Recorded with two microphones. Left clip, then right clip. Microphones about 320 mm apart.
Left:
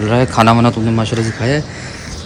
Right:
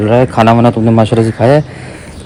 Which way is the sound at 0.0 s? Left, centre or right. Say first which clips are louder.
Right 4 dB; centre.